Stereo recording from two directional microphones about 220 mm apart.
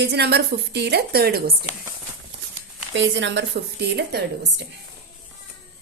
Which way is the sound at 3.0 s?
55° right (ahead or behind).